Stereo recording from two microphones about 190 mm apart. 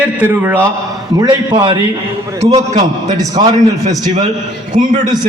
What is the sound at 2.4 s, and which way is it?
Speech, 35° right (ahead or behind).